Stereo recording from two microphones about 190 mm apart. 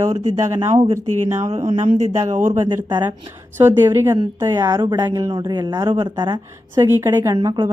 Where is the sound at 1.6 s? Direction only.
30° right (ahead or behind).